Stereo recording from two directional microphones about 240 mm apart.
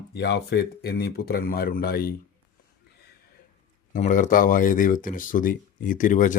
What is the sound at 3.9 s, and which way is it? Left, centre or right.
Speech, left.